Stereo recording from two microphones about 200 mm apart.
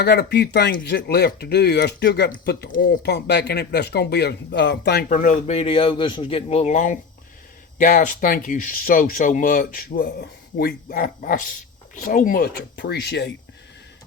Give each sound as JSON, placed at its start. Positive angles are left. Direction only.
{"t": 0.0, "sound": "speech", "side_deg": 55}